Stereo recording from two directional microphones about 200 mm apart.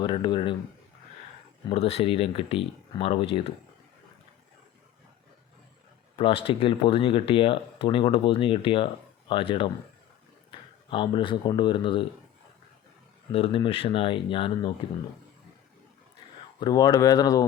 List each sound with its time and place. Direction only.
0.0 s speech: 25° left (ahead or behind)
1.7 s speech: 30° left (ahead or behind)
6.1 s speech: 25° left (ahead or behind)
10.8 s speech: 25° left (ahead or behind)
13.3 s speech: 25° left (ahead or behind)
16.6 s speech: 20° left (ahead or behind)